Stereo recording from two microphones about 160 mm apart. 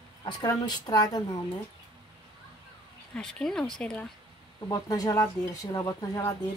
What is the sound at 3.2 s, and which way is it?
Speech, 5° left (ahead or behind).